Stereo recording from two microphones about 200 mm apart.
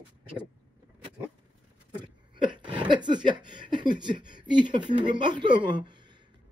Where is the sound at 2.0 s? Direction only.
25° right (ahead or behind).